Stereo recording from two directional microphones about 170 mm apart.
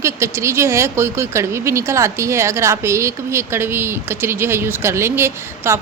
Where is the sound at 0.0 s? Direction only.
15° right (ahead or behind).